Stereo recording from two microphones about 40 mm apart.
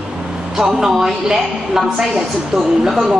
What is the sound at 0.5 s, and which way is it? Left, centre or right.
A woman's voice, centre.